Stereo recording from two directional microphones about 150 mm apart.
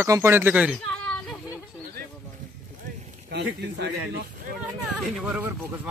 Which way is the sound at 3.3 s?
90° right.